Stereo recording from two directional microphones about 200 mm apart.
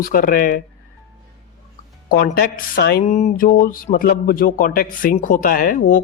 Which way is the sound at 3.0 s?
35° left (ahead or behind).